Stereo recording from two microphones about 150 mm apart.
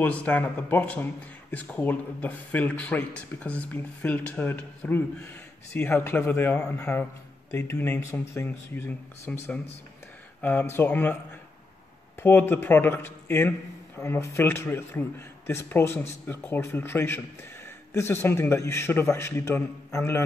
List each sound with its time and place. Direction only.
0.0 s a man's voice: 10° left (ahead or behind)
12.2 s a man's voice: 15° left (ahead or behind)